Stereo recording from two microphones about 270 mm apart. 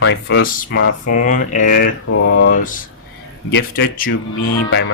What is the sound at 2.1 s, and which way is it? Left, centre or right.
Speech, left.